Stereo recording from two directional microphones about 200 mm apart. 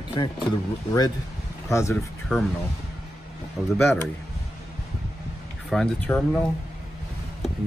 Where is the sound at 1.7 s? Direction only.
15° left (ahead or behind).